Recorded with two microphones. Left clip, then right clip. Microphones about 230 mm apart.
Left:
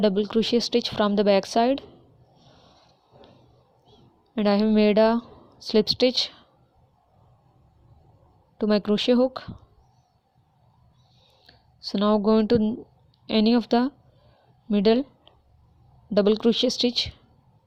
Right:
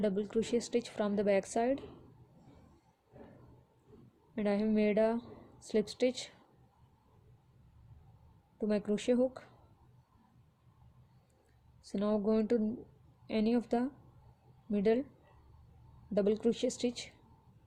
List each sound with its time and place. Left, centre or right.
0.0 s a woman's voice: left
4.4 s a woman's voice: left
8.5 s a woman's voice: left
11.8 s a woman's voice: left
16.1 s a woman's voice: left